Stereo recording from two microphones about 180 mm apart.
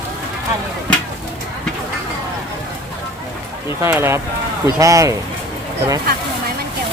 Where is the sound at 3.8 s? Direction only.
15° right (ahead or behind).